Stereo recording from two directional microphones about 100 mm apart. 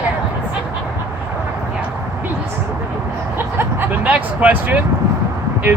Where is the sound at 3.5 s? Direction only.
20° right (ahead or behind).